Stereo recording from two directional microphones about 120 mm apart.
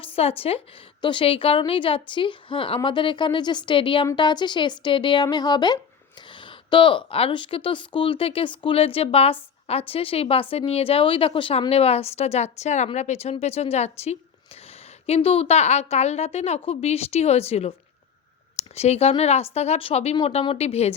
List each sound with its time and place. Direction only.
0.0 s a woman's voice: 55° left (ahead or behind)